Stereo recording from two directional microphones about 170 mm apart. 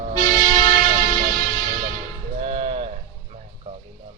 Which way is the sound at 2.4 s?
40° right (ahead or behind).